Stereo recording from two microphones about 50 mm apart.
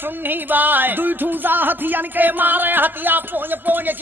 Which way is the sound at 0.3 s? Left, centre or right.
Right.